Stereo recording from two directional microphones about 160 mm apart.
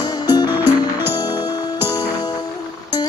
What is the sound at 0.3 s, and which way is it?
Music, 25° left (ahead or behind).